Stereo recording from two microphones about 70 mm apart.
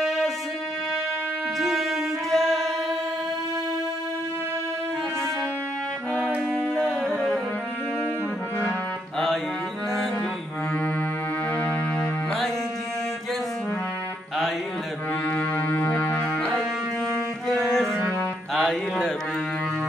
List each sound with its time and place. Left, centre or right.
0.0 s music: centre
1.6 s music: centre
6.7 s music: centre
15.2 s music: left
17.5 s music: centre